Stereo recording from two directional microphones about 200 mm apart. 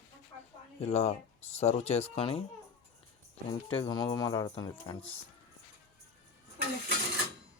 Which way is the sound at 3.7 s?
25° left (ahead or behind).